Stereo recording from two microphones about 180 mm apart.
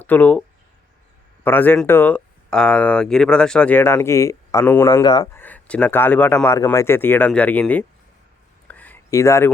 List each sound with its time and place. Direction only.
0.0 s speech: 10° left (ahead or behind)
1.5 s speech: 10° left (ahead or behind)
4.9 s speech: 25° left (ahead or behind)
5.4 s speech: 10° left (ahead or behind)
8.6 s a sound: 10° left (ahead or behind)